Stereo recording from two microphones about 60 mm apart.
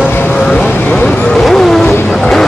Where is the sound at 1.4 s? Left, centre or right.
Centre.